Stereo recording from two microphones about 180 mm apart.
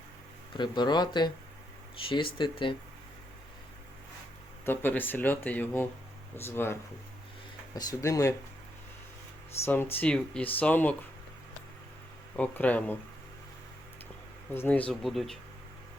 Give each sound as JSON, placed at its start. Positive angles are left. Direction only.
{"t": 0.5, "sound": "speech", "side_deg": 25}
{"t": 4.6, "sound": "speech", "side_deg": 10}
{"t": 9.6, "sound": "speech", "side_deg": 10}
{"t": 12.4, "sound": "speech", "side_deg": 10}
{"t": 14.5, "sound": "speech", "side_deg": 10}